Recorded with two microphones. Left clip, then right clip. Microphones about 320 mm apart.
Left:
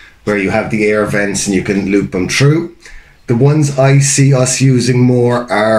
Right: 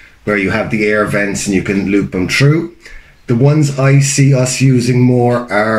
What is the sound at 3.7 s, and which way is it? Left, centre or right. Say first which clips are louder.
Speech: left 2 dB; centre.